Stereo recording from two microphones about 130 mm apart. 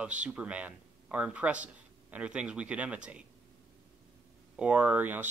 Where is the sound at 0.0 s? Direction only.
10° right (ahead or behind).